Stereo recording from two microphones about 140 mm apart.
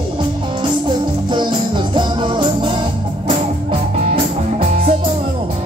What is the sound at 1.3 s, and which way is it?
Music, 35° right (ahead or behind).